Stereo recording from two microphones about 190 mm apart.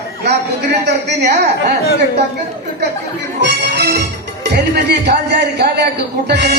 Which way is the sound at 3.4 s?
60° right (ahead or behind).